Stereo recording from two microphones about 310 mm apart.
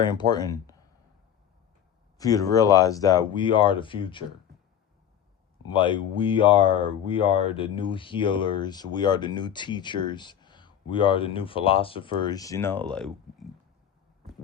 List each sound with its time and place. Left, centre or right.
0.0 s speech: centre
2.1 s speech: centre
5.7 s speech: centre